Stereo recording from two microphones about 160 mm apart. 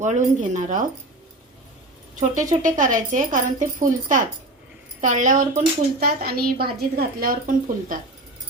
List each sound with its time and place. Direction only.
0.0 s speech: 50° right (ahead or behind)
2.3 s speech: 50° right (ahead or behind)
6.0 s a woman's voice: 75° right (ahead or behind)